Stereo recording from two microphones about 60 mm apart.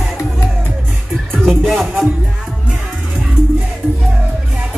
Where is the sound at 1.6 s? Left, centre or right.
Centre.